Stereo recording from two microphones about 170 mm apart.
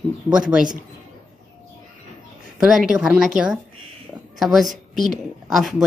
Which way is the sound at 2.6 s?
Centre (ahead or behind).